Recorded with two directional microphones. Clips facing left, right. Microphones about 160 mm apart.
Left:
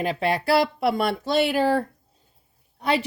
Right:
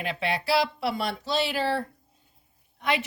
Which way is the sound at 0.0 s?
40° left (ahead or behind).